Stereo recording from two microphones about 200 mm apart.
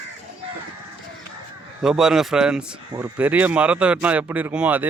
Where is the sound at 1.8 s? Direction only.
5° right (ahead or behind).